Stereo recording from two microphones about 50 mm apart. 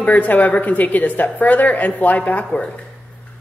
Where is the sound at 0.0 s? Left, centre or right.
Left.